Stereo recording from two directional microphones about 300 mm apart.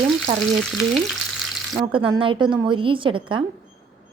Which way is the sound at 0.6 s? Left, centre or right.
Centre.